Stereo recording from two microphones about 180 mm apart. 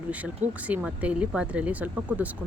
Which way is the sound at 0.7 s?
5° right (ahead or behind).